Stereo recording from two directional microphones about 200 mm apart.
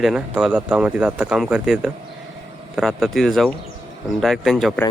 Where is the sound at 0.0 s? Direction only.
5° right (ahead or behind).